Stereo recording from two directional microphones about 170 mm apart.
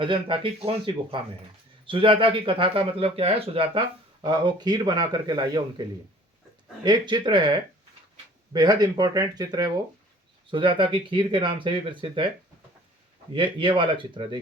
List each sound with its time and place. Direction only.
0.0 s speech: 30° right (ahead or behind)
6.8 s speech: 25° right (ahead or behind)
8.5 s speech: 25° right (ahead or behind)
13.3 s speech: 30° right (ahead or behind)